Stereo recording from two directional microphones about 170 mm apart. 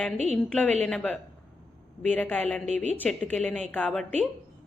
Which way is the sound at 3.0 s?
10° left (ahead or behind).